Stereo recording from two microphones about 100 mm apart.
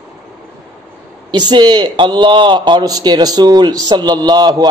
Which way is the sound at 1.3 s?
45° right (ahead or behind).